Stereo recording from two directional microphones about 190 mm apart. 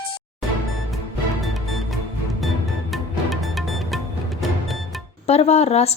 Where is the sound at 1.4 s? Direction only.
Centre (ahead or behind).